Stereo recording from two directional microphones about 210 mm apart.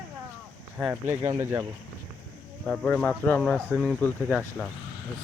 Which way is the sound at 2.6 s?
Centre (ahead or behind).